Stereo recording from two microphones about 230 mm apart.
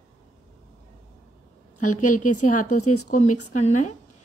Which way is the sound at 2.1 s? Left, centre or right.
Left.